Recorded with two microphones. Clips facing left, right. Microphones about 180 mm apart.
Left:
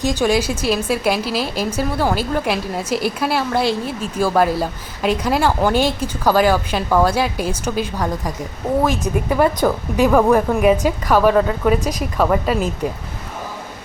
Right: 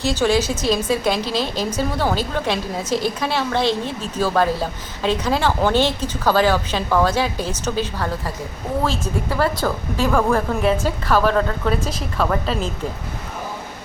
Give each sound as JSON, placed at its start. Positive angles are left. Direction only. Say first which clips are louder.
{"t": 0.0, "sound": "speech", "louder": "left 1 dB", "side_deg": 15}